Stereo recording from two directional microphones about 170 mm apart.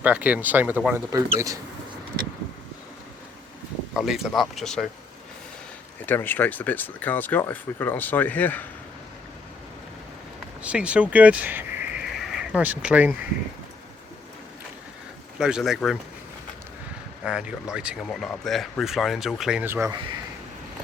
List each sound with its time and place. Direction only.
0.0 s speech: 10° right (ahead or behind)
1.1 s speech: 20° right (ahead or behind)
3.9 s speech: centre (ahead or behind)
6.1 s speech: 10° left (ahead or behind)
10.6 s speech: 5° right (ahead or behind)
15.4 s speech: 5° right (ahead or behind)
17.2 s speech: 5° right (ahead or behind)